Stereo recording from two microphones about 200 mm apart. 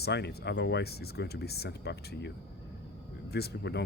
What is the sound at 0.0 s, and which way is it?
Speech, 55° left (ahead or behind).